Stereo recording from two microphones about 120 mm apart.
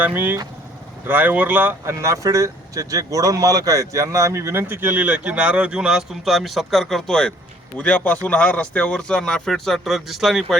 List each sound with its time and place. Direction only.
0.0 s speech: 15° right (ahead or behind)